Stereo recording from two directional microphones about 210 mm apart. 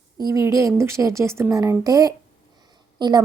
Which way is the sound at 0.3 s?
15° right (ahead or behind).